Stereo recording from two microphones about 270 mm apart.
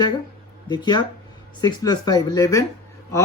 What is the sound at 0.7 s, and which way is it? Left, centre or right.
Speech, centre.